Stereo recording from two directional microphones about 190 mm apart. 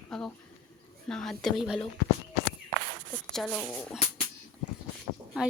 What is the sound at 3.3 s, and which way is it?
Speech, 5° left (ahead or behind).